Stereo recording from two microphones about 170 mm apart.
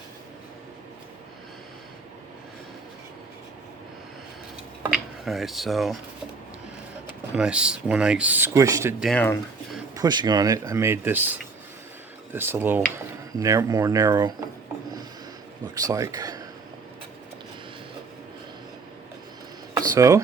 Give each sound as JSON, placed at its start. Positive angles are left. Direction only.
{"t": 5.2, "sound": "speech", "side_deg": 0}
{"t": 7.1, "sound": "speech", "side_deg": -5}
{"t": 9.0, "sound": "speech", "side_deg": 0}
{"t": 9.9, "sound": "speech", "side_deg": -25}
{"t": 15.7, "sound": "speech", "side_deg": -20}
{"t": 19.7, "sound": "a sound", "side_deg": -20}